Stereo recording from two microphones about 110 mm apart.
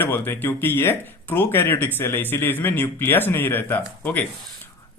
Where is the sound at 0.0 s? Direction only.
15° left (ahead or behind).